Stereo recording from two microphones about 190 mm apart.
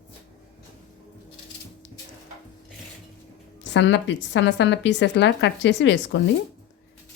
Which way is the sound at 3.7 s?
70° left (ahead or behind).